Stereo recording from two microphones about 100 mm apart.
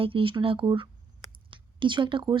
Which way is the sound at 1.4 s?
55° right (ahead or behind).